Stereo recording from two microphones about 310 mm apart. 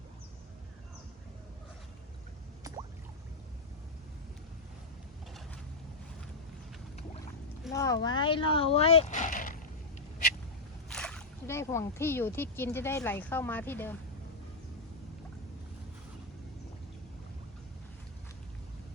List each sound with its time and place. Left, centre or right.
7.7 s speech: centre; by 9.6 s left
10.8 s speech: centre